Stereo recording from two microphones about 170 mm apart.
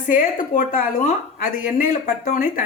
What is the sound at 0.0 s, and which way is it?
A woman's voice, 55° left (ahead or behind).